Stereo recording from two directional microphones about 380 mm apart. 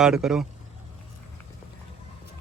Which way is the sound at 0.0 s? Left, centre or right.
Centre.